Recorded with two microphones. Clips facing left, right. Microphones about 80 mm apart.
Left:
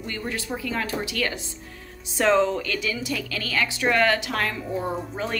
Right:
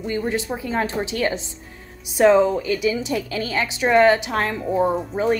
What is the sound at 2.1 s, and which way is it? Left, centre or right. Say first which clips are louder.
A woman's voice: right 5 dB; centre.